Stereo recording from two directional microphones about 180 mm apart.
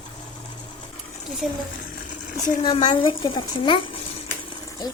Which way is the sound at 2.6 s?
30° left (ahead or behind).